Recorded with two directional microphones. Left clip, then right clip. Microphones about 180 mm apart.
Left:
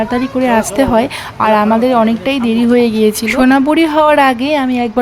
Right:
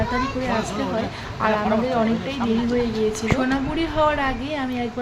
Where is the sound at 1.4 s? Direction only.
50° left (ahead or behind).